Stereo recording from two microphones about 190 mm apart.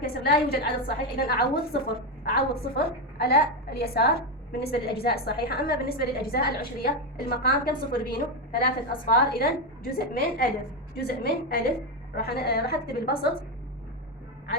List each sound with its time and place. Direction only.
0.0 s a woman's voice: 55° left (ahead or behind)